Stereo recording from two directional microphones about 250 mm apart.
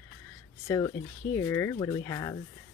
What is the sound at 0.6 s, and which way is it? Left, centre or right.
Speech, centre.